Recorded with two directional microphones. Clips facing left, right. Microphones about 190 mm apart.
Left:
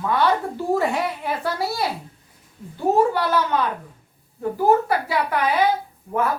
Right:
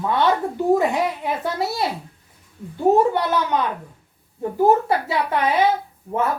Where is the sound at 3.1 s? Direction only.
20° right (ahead or behind).